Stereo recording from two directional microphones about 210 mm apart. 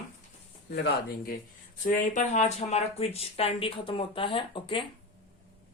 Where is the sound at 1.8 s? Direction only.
40° left (ahead or behind).